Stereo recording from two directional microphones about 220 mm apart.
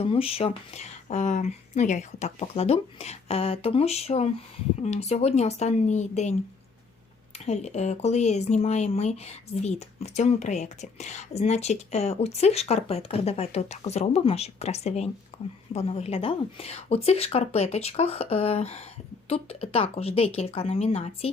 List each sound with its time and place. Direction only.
0.0 s speech: 25° left (ahead or behind)
7.3 s speech: 30° left (ahead or behind)